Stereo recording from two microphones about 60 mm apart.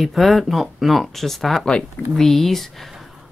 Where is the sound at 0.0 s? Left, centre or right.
Centre.